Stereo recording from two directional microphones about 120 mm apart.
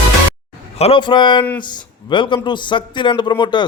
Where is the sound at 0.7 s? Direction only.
60° left (ahead or behind).